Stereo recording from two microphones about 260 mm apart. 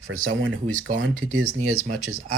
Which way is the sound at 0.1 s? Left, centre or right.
Right.